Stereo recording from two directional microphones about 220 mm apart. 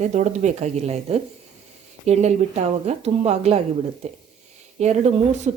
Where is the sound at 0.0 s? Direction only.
30° right (ahead or behind).